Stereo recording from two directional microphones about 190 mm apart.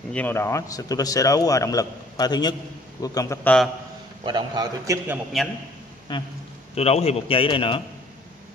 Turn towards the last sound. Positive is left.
turn(degrees=25)  # may be behind; listen again after turning